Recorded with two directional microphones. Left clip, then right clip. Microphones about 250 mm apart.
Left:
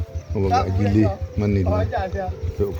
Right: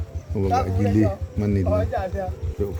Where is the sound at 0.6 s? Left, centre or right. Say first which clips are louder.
Left 1 dB; centre.